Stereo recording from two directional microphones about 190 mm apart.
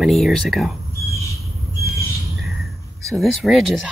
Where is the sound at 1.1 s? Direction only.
15° left (ahead or behind).